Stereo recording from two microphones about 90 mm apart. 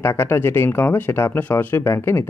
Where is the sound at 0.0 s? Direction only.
30° left (ahead or behind).